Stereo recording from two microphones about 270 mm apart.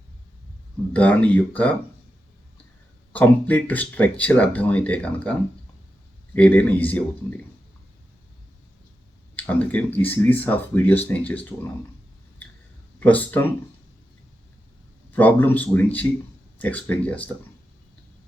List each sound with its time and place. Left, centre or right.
0.9 s speech: centre
3.1 s speech: centre
9.3 s speech: centre
13.0 s speech: centre
15.1 s speech: centre